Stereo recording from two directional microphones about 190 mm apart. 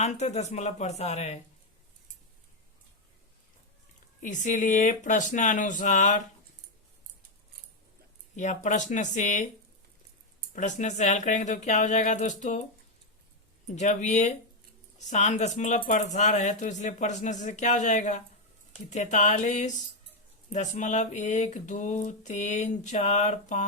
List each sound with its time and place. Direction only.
0.0 s speech: 35° left (ahead or behind)
4.2 s speech: 40° left (ahead or behind)
8.4 s speech: 40° left (ahead or behind)
10.5 s speech: 40° left (ahead or behind)
13.7 s speech: 40° left (ahead or behind)